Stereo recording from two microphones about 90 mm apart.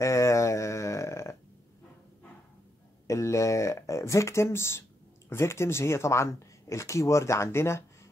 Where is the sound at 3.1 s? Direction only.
35° left (ahead or behind).